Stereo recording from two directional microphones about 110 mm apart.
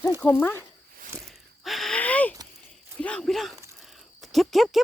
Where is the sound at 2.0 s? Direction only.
15° left (ahead or behind).